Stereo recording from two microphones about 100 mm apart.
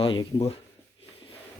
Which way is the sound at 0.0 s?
55° left (ahead or behind).